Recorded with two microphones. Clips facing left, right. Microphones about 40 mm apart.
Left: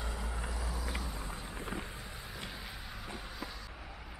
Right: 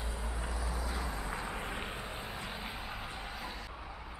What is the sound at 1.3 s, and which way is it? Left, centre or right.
Vehicle, right.